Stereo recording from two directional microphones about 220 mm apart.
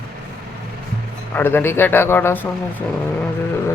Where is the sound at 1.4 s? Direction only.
10° left (ahead or behind).